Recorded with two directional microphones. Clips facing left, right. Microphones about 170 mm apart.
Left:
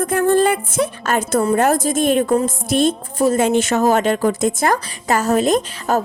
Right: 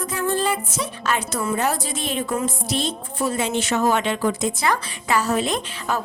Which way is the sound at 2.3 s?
50° left (ahead or behind).